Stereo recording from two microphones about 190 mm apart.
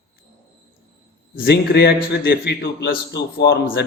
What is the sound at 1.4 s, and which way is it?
A man's voice, 60° left (ahead or behind).